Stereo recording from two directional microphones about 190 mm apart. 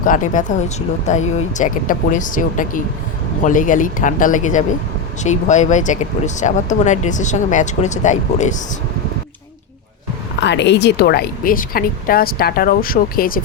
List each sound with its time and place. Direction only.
0.0 s speech: 45° left (ahead or behind)
10.4 s speech: 65° left (ahead or behind); by 13.4 s 50° left (ahead or behind)